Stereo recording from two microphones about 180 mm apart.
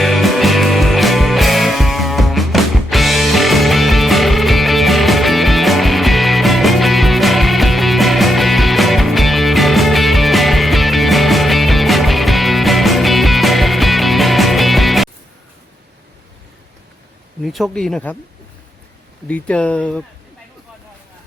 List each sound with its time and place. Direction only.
0.0 s music: centre (ahead or behind)
17.4 s speech: centre (ahead or behind)
19.3 s speech: 5° left (ahead or behind)